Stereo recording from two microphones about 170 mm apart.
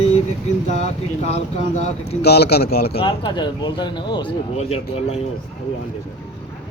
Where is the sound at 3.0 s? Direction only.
30° left (ahead or behind).